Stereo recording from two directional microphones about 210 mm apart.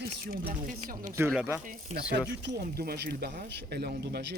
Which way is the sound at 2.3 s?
55° right (ahead or behind).